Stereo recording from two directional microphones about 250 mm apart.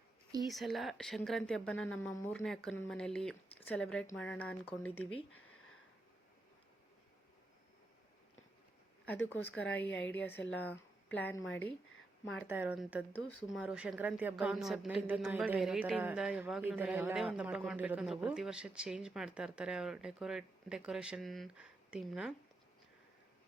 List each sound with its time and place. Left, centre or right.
0.4 s a woman's voice: centre
9.6 s a woman's voice: centre